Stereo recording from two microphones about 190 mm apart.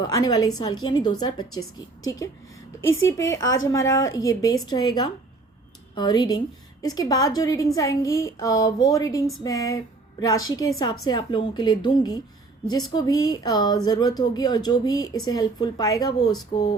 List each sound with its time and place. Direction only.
0.2 s a woman's voice: 20° left (ahead or behind)
10.4 s a woman's voice: 90° left
10.8 s a woman's voice: 20° left (ahead or behind)